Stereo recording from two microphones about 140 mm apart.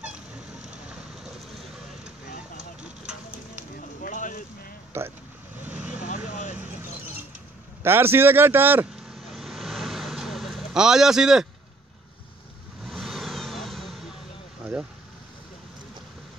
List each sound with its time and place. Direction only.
4.0 s a sound: 70° left (ahead or behind)
4.9 s speech: 20° right (ahead or behind)
5.6 s vehicle: 10° right (ahead or behind)
6.0 s vehicle: 65° left (ahead or behind)
7.8 s speech: 15° right (ahead or behind)
9.1 s vehicle: centre (ahead or behind)
12.8 s vehicle: centre (ahead or behind)